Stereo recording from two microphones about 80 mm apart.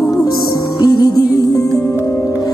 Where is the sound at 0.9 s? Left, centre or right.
Left.